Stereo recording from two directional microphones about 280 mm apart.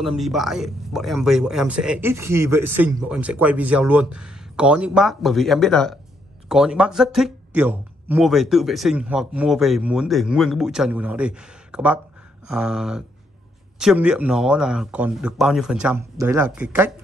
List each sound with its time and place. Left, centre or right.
0.0 s speech: centre